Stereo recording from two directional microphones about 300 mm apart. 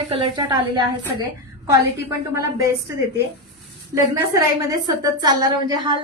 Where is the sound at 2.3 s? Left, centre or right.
Centre.